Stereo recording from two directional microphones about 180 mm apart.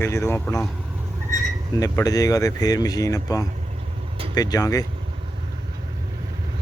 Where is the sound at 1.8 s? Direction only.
20° left (ahead or behind).